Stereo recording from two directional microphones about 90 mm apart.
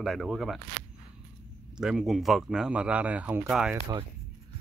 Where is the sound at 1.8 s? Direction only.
5° right (ahead or behind).